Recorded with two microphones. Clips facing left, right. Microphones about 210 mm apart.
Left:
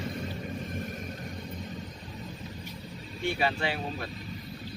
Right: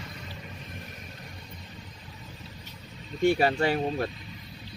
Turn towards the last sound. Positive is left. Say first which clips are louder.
# right 7 dB
turn(degrees=-45)  # may be behind; listen again after turning